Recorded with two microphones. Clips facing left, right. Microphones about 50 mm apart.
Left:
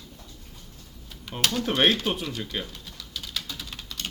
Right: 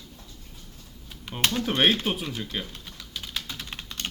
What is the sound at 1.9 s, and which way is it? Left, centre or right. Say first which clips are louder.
Speech: even; centre.